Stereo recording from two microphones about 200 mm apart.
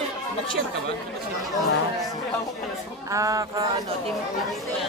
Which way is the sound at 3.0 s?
15° right (ahead or behind).